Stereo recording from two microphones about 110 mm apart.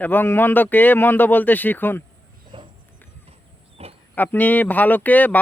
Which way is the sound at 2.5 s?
50° right (ahead or behind).